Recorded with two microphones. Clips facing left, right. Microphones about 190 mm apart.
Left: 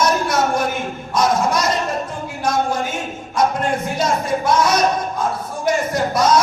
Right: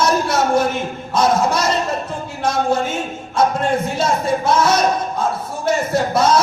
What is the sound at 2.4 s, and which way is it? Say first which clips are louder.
Speech: right 2 dB; 25° right (ahead or behind).